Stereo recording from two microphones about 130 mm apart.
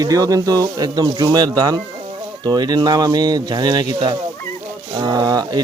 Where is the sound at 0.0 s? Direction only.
30° right (ahead or behind).